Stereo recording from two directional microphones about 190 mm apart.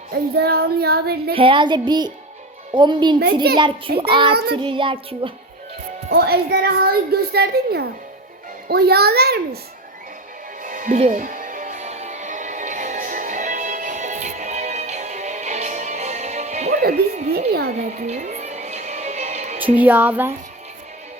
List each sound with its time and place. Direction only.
0.3 s a woman's voice: 55° right (ahead or behind)
1.3 s speech: 30° right (ahead or behind)
6.1 s a woman's voice: 55° right (ahead or behind)
10.6 s music: 45° right (ahead or behind)
19.8 s speech: 10° right (ahead or behind)